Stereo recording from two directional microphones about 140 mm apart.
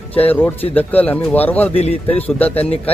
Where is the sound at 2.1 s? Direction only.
10° left (ahead or behind).